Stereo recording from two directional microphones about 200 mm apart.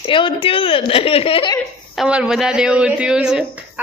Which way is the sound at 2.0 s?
5° right (ahead or behind).